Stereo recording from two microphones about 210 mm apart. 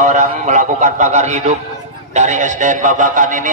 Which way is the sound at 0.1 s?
35° right (ahead or behind).